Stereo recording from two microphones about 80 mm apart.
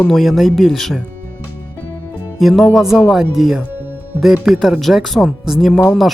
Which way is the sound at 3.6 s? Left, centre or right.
Right.